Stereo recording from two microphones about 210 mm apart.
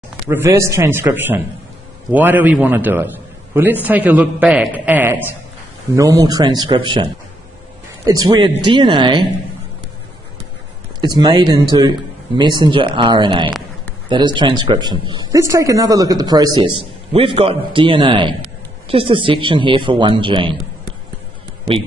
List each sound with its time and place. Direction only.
0.3 s a man's voice: 15° right (ahead or behind)
11.0 s speech: 20° right (ahead or behind)